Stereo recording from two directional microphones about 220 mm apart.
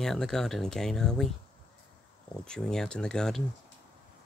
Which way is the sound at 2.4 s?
5° left (ahead or behind).